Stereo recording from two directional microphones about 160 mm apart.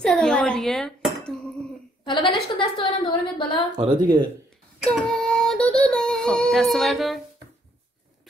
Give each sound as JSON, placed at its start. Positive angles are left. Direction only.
{"t": 0.0, "sound": "speech", "side_deg": 5}
{"t": 2.0, "sound": "a woman's voice", "side_deg": 30}
{"t": 3.7, "sound": "speech", "side_deg": -30}
{"t": 4.8, "sound": "child singing", "side_deg": 5}